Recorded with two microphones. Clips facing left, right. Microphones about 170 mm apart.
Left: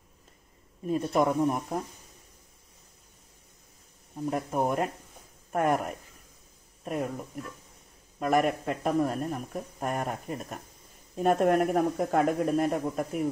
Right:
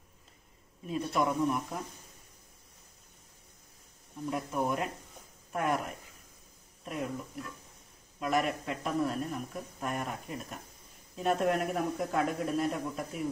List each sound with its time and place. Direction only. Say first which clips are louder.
0.8 s a man's voice: left 5 dB; 45° left (ahead or behind)
4.3 s a man's voice: left 4 dB; 45° left (ahead or behind)
8.2 s a man's voice: left 5 dB; 50° left (ahead or behind)